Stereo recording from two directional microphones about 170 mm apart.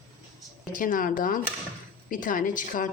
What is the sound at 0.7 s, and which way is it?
Speech, 55° left (ahead or behind).